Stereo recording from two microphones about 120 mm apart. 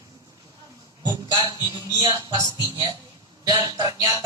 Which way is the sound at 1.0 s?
35° right (ahead or behind).